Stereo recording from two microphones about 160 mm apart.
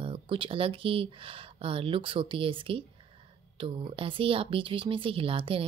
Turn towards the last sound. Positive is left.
turn(degrees=-35)  # may be behind; listen again after turning